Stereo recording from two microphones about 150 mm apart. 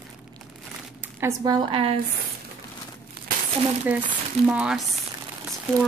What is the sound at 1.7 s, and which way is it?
Speech, 40° right (ahead or behind).